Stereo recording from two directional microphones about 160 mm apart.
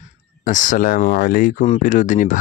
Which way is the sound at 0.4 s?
55° left (ahead or behind).